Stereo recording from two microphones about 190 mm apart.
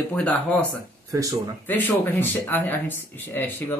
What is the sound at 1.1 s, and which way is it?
Speech, 20° right (ahead or behind).